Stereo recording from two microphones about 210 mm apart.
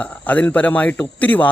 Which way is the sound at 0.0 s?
5° left (ahead or behind).